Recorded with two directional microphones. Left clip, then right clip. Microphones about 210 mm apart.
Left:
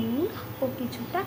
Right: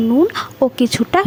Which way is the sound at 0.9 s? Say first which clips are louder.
Right 15 dB; 50° right (ahead or behind).